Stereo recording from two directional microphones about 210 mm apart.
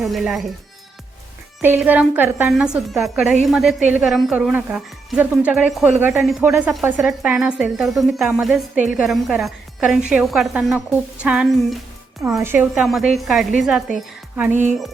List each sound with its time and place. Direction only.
0.0 s a woman's voice: centre (ahead or behind)
1.6 s a woman's voice: 5° right (ahead or behind)
14.5 s speech: 35° right (ahead or behind)